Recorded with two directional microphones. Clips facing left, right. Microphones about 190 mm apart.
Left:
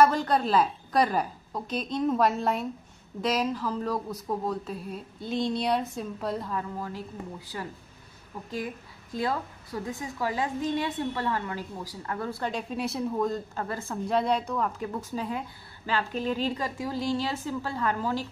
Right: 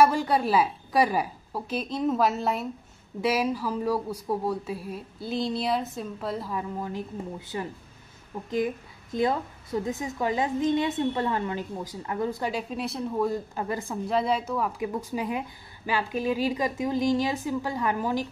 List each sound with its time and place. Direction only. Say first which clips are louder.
0.0 s a woman's voice: right 1 dB; 10° right (ahead or behind)
6.5 s a woman's voice: right 2 dB; 15° right (ahead or behind)
14.0 s a woman's voice: even; centre (ahead or behind)